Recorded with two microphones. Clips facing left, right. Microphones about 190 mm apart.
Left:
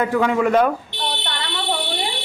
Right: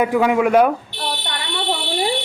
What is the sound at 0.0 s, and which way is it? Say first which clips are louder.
Speech: right 2 dB; 10° right (ahead or behind).